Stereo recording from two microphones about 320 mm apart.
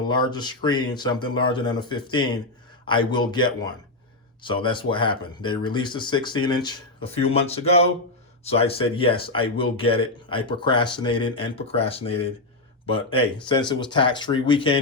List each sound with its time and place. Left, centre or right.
0.1 s speech: centre